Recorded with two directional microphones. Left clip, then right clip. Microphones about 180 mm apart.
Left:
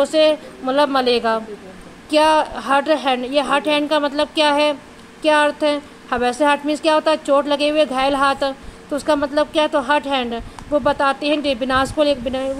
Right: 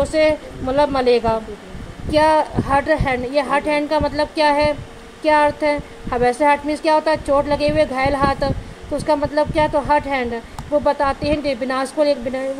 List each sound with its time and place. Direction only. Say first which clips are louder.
0.0 s a woman's voice: left 1 dB; 30° left (ahead or behind)